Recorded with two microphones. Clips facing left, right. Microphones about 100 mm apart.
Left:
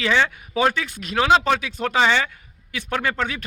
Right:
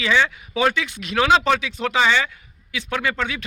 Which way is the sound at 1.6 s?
40° left (ahead or behind).